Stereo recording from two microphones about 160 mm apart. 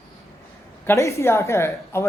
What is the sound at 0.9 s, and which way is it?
Speech, 20° left (ahead or behind).